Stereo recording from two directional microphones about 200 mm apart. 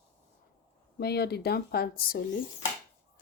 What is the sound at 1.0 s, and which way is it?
Speech, 55° left (ahead or behind).